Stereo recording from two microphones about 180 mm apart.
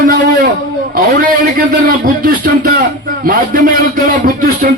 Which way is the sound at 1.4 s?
50° right (ahead or behind).